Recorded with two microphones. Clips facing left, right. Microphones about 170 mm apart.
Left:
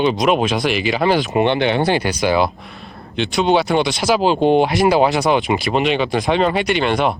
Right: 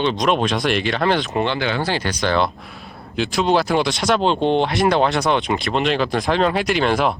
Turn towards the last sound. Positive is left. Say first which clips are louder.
# left 1 dB
turn(degrees=0)  # may be behind; listen again after turning